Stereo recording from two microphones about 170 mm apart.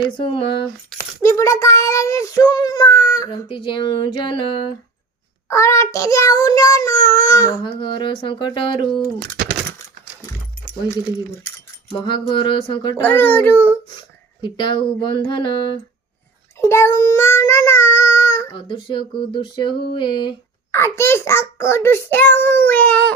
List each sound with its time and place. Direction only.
0.2 s child singing: 30° left (ahead or behind)
1.2 s child singing: 15° left (ahead or behind)
5.5 s child singing: 15° left (ahead or behind)
11.9 s child singing: 25° left (ahead or behind)
13.0 s a child's voice: 10° left (ahead or behind)
14.4 s child singing: 30° left (ahead or behind)
16.6 s child singing: 15° left (ahead or behind)
18.5 s child singing: 30° left (ahead or behind)
20.7 s a child's voice: 15° left (ahead or behind)